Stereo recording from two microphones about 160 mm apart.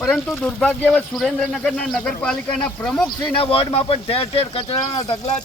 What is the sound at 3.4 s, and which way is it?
Speech, 35° left (ahead or behind).